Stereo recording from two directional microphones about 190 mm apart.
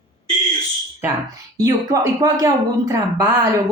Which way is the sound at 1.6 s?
20° right (ahead or behind).